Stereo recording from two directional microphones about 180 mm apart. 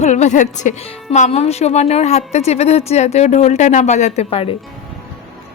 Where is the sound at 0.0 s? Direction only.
40° left (ahead or behind).